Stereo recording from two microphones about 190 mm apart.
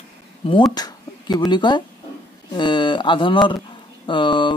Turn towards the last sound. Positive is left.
turn(degrees=25)  # may be behind; listen again after turning